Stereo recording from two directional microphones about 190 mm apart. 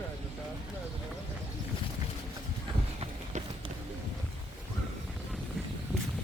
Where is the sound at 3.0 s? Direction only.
30° right (ahead or behind).